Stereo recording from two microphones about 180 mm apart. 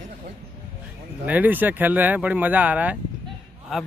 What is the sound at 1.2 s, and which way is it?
Speech, 10° right (ahead or behind).